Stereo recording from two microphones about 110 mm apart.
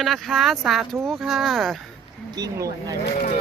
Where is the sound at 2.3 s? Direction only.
35° right (ahead or behind).